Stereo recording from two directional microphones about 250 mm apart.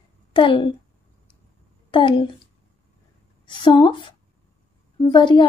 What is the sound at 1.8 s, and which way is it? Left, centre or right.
Speech, centre.